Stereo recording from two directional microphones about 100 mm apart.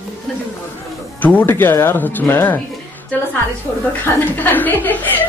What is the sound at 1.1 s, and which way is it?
A man's voice, 15° left (ahead or behind).